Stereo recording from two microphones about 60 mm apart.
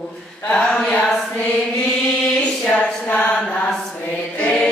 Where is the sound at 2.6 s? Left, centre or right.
Centre.